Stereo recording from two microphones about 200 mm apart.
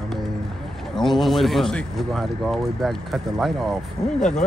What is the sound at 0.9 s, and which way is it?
Speech, centre (ahead or behind).